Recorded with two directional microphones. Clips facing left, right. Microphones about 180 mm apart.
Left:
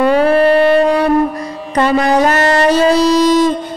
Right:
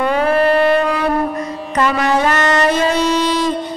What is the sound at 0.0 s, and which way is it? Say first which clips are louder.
Music: left 4 dB; 30° left (ahead or behind).